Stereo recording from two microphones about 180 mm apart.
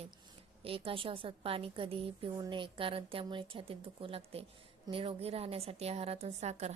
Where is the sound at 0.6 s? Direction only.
30° right (ahead or behind).